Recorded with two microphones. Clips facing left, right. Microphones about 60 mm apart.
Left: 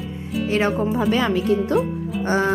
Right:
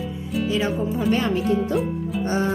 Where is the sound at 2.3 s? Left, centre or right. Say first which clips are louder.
Left 4 dB; left.